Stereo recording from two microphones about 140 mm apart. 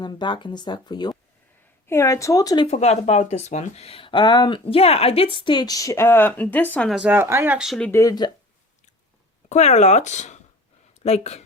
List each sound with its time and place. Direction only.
0.0 s speech: 30° left (ahead or behind)
1.9 s speech: 20° left (ahead or behind)
2.6 s speech: 50° left (ahead or behind); by 6.9 s 10° left (ahead or behind)
6.9 s speech: 10° right (ahead or behind)
7.9 s speech: 20° left (ahead or behind)
9.5 s speech: 55° left (ahead or behind)